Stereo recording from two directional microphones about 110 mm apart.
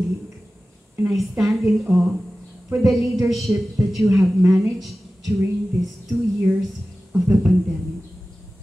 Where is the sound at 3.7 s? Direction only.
25° right (ahead or behind).